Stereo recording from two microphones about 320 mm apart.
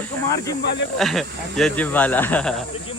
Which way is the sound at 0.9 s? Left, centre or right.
Centre.